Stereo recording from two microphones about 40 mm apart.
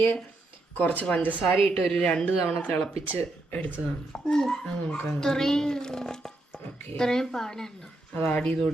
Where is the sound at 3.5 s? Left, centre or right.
Left.